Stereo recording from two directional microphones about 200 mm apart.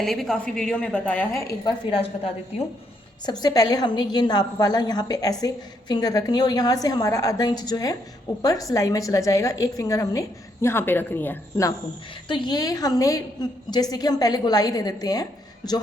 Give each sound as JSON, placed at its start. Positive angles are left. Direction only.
{"t": 0.0, "sound": "a woman's voice", "side_deg": 0}
{"t": 1.9, "sound": "a woman's voice", "side_deg": 30}
{"t": 12.3, "sound": "a woman's voice", "side_deg": 20}